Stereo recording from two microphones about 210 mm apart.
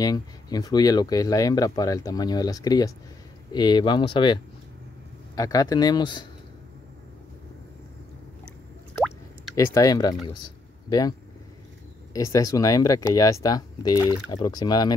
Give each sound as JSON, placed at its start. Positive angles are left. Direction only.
{"t": 0.0, "sound": "speech", "side_deg": 20}
{"t": 9.6, "sound": "speech", "side_deg": 15}